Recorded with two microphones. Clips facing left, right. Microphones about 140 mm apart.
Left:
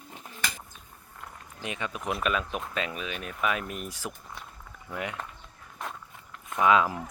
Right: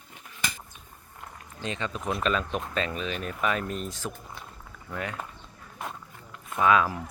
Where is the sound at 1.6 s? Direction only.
10° left (ahead or behind).